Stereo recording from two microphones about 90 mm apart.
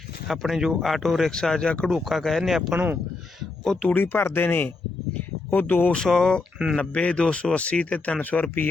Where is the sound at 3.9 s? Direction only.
20° left (ahead or behind).